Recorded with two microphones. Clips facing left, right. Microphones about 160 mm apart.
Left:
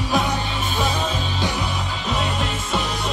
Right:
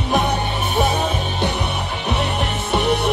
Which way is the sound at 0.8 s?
60° right (ahead or behind).